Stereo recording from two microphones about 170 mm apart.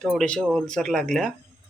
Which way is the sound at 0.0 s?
5° left (ahead or behind).